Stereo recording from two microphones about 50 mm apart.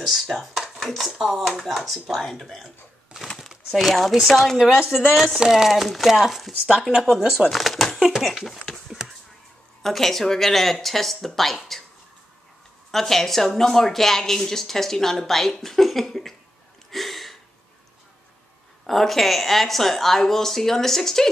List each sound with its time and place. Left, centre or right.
0.4 s speech: centre
9.8 s speech: centre
12.9 s speech: centre
16.9 s a sound: centre
18.9 s speech: centre